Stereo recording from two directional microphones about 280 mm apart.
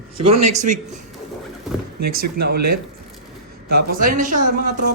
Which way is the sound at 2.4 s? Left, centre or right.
Right.